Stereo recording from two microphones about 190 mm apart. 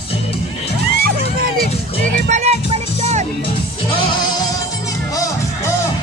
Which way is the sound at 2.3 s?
35° right (ahead or behind).